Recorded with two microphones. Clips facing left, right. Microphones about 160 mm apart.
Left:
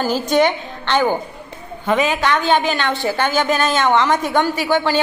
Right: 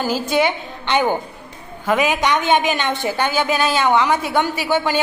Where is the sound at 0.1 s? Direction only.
10° right (ahead or behind).